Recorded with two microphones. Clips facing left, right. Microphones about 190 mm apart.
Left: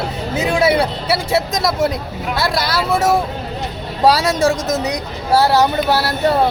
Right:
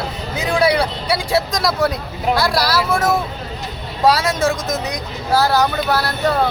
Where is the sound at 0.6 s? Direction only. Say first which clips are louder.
Even; 25° left (ahead or behind).